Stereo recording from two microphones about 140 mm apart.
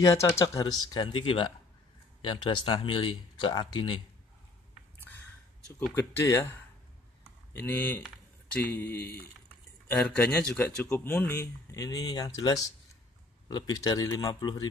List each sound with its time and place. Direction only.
0.0 s speech: 20° left (ahead or behind)
4.9 s a sound: 15° left (ahead or behind)
5.9 s speech: 20° left (ahead or behind)
7.5 s speech: 15° left (ahead or behind)